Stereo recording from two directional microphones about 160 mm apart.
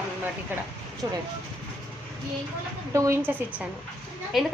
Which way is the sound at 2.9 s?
20° right (ahead or behind).